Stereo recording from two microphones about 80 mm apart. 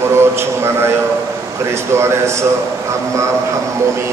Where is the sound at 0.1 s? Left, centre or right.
Right.